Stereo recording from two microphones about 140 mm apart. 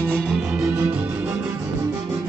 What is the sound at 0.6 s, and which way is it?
Music, 15° right (ahead or behind).